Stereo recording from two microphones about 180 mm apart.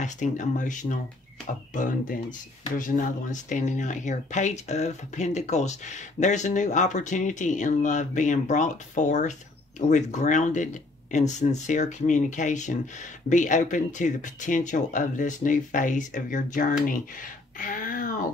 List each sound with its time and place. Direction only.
0.0 s speech: 45° left (ahead or behind)
17.6 s wail: 50° left (ahead or behind)